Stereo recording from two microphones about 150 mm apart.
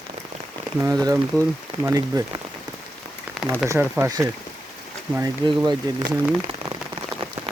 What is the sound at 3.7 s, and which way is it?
Speech, 15° right (ahead or behind).